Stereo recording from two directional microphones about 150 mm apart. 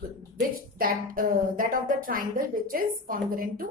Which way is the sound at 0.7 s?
70° right (ahead or behind).